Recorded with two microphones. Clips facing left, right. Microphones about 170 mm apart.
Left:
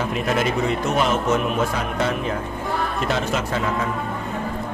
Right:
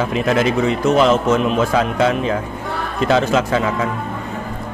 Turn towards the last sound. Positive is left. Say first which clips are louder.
# right 7 dB
turn(degrees=-90)